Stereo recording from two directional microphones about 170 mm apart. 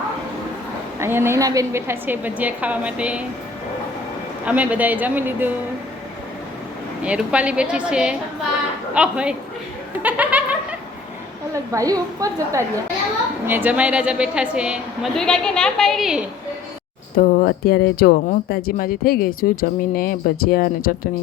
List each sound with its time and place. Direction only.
0.9 s a woman's voice: 15° right (ahead or behind)
4.4 s a woman's voice: 10° right (ahead or behind)
7.0 s a woman's voice: 5° right (ahead or behind)
10.0 s snicker: 10° right (ahead or behind)
11.5 s a woman's voice: 20° right (ahead or behind); by 16.2 s centre (ahead or behind)
17.2 s speech: 60° left (ahead or behind)